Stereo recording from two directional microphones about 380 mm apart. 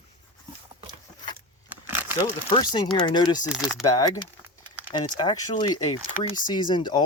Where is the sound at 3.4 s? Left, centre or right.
Centre.